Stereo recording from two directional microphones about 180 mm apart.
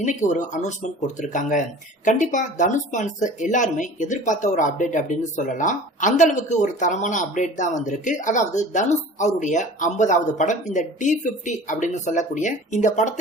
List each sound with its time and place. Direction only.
0.0 s speech: 45° left (ahead or behind)